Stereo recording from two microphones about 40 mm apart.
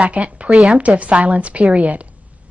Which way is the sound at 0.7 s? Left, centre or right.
Right.